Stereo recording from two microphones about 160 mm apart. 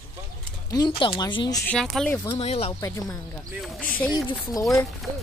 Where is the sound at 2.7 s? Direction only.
20° left (ahead or behind).